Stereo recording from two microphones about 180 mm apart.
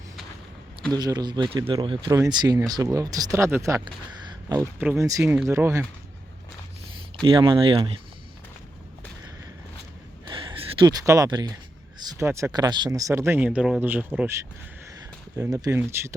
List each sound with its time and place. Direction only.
0.9 s speech: 20° right (ahead or behind)
7.3 s speech: 30° right (ahead or behind)
10.2 s a sound: 30° right (ahead or behind)
11.0 s speech: 20° right (ahead or behind)
15.4 s speech: 20° right (ahead or behind)